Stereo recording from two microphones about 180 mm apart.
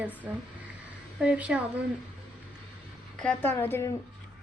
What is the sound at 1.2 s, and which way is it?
Speech, 5° right (ahead or behind).